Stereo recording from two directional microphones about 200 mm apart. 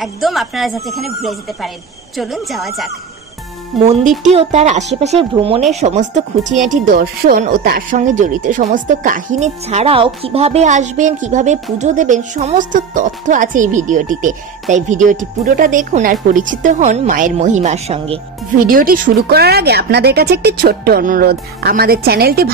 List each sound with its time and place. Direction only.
0.0 s speech: centre (ahead or behind)
3.8 s speech: 35° right (ahead or behind)
18.7 s speech: 45° right (ahead or behind)